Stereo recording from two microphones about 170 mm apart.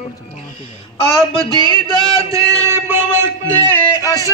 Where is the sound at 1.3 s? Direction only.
25° right (ahead or behind).